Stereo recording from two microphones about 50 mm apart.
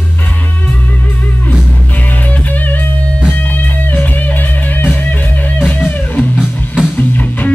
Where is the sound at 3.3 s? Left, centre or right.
Left.